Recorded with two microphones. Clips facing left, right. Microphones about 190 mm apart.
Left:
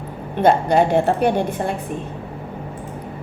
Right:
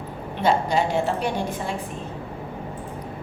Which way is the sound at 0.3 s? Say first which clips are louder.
Left 6 dB; 55° left (ahead or behind).